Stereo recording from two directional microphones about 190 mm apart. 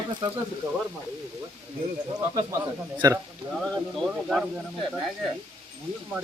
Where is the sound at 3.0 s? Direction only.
20° right (ahead or behind).